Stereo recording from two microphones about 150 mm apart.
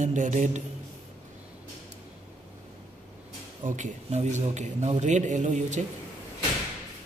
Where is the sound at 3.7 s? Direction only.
50° right (ahead or behind).